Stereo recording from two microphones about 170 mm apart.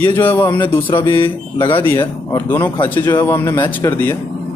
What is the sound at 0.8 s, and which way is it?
Speech, 30° left (ahead or behind).